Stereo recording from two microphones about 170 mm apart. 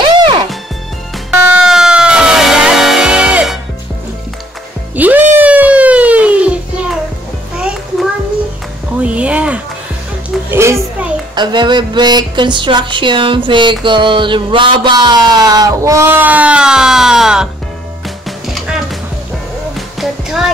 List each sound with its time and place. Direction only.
1.3 s music: 10° right (ahead or behind)
4.9 s music: 10° right (ahead or behind)
10.5 s children playing: 15° right (ahead or behind)
11.3 s speech: 25° right (ahead or behind); by 17.5 s 5° right (ahead or behind)
18.0 s music: centre (ahead or behind)
20.0 s music: 5° right (ahead or behind)